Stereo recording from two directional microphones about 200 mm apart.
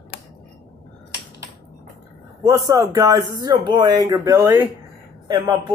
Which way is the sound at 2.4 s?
20° right (ahead or behind).